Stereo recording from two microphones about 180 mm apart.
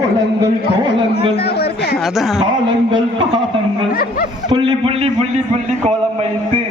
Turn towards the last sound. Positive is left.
turn(degrees=-30)  # may be behind; listen again after turning